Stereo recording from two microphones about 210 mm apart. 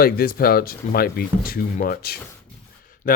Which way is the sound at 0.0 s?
45° left (ahead or behind).